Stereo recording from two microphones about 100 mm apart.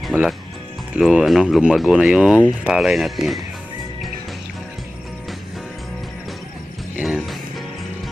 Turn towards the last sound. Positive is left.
turn(degrees=-10)  # may be behind; listen again after turning